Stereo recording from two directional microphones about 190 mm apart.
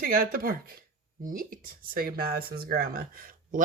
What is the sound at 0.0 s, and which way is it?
Speech, 50° right (ahead or behind).